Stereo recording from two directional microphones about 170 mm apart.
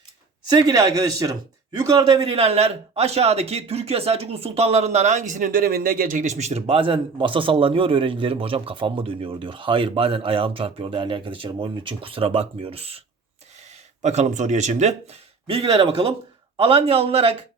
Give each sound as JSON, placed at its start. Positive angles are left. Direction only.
{"t": 0.4, "sound": "speech", "side_deg": -20}
{"t": 2.2, "sound": "speech", "side_deg": -35}
{"t": 14.0, "sound": "speech", "side_deg": -40}